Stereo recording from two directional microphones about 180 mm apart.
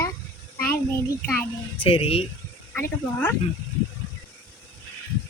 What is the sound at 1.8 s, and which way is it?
Speech, 30° left (ahead or behind).